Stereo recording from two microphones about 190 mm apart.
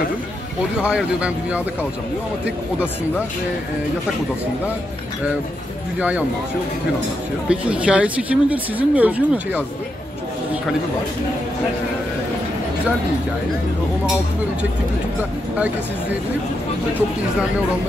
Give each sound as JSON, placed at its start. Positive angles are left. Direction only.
{"t": 0.8, "sound": "a woman's voice", "side_deg": -5}
{"t": 5.9, "sound": "a woman's voice", "side_deg": -5}
{"t": 7.4, "sound": "a woman's voice", "side_deg": -5}
{"t": 15.5, "sound": "a woman's voice", "side_deg": -5}